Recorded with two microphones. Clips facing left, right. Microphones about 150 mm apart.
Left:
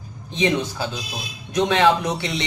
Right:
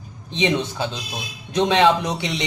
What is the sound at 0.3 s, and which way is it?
Speech, 20° right (ahead or behind).